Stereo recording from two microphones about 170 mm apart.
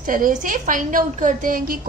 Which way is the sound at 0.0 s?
50° right (ahead or behind).